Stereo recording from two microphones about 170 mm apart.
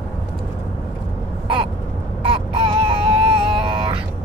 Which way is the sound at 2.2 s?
30° right (ahead or behind).